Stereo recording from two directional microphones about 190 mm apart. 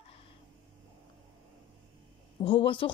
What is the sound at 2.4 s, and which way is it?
Speech, 25° left (ahead or behind).